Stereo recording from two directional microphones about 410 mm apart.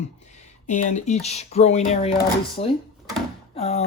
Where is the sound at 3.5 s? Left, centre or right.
Centre.